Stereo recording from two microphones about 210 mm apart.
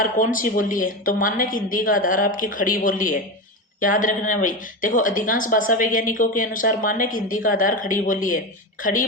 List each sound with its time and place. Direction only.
0.0 s a woman's voice: 40° left (ahead or behind)